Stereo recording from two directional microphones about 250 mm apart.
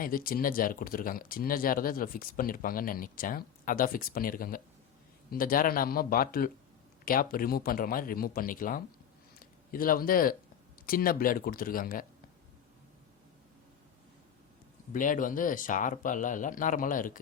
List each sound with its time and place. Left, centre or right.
0.0 s speech: left
14.9 s speech: left